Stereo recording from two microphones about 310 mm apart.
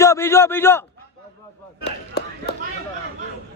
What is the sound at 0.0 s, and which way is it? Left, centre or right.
Speech, centre.